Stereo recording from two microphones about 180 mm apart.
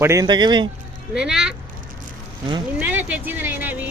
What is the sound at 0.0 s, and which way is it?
Speech, 15° right (ahead or behind).